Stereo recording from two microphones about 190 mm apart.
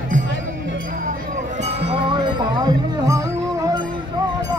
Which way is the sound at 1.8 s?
30° right (ahead or behind).